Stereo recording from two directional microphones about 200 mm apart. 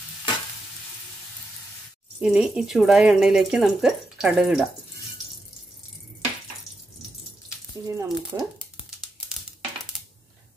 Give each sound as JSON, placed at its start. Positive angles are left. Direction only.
{"t": 2.1, "sound": "speech", "side_deg": -5}
{"t": 7.8, "sound": "speech", "side_deg": -15}